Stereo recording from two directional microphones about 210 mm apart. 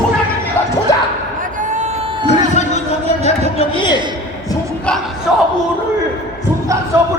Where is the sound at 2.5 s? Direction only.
35° left (ahead or behind).